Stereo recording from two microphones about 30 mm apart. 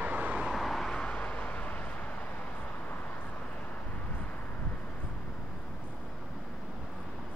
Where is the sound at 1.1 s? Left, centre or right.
Left.